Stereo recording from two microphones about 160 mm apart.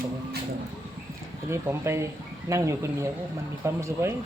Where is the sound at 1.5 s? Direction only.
15° right (ahead or behind).